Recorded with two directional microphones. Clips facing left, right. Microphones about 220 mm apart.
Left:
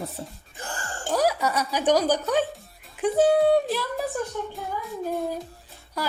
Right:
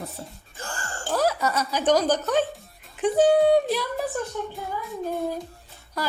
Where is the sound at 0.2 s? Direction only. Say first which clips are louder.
Left 2 dB; 25° left (ahead or behind).